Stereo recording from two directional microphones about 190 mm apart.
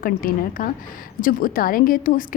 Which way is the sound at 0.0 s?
50° left (ahead or behind).